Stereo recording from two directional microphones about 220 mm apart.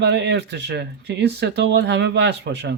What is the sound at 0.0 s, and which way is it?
Speech, 50° right (ahead or behind).